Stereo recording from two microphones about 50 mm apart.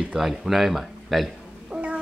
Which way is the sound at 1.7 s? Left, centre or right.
Centre.